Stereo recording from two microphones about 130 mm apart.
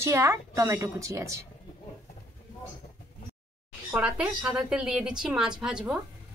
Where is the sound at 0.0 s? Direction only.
25° right (ahead or behind).